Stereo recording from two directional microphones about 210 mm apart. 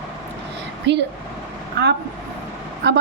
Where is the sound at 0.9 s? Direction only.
55° right (ahead or behind).